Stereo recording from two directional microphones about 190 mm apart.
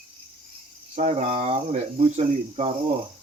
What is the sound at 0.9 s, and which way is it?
Speech, 35° right (ahead or behind).